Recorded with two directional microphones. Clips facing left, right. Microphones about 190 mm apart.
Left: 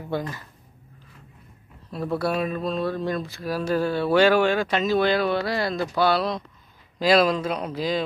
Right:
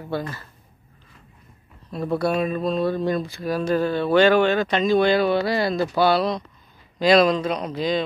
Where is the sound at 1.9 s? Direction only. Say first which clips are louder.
Right 3 dB; centre (ahead or behind).